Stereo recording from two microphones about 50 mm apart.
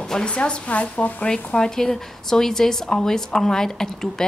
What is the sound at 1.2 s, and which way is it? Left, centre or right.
A woman's voice, centre.